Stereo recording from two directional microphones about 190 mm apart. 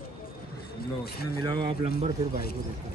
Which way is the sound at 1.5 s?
25° right (ahead or behind).